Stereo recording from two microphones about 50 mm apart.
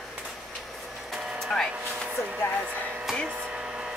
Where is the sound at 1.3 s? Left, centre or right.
Centre.